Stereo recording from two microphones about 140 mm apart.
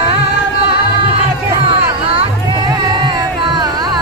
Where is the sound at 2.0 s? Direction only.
35° right (ahead or behind).